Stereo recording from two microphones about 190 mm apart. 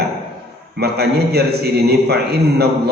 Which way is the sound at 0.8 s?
60° right (ahead or behind).